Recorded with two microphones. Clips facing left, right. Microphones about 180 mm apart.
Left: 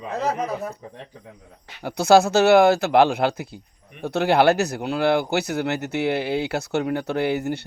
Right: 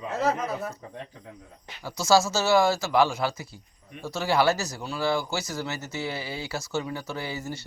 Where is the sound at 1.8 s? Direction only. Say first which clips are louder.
Left 6 dB; 60° left (ahead or behind).